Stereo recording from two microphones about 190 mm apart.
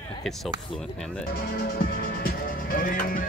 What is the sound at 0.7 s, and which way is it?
Speech, 5° left (ahead or behind).